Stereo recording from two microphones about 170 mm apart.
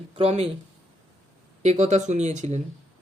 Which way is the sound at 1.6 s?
40° right (ahead or behind).